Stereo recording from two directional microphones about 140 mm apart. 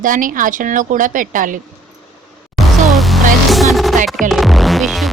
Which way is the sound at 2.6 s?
Centre (ahead or behind).